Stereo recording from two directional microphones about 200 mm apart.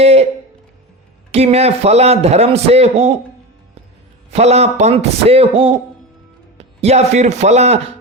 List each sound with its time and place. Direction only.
0.0 s a sound: 30° right (ahead or behind)
1.3 s a man's voice: 30° right (ahead or behind)
4.3 s a man's voice: 30° right (ahead or behind)